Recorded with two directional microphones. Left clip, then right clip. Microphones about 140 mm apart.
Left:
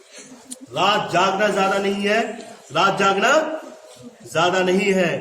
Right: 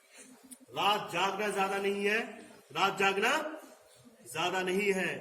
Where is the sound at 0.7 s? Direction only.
30° left (ahead or behind).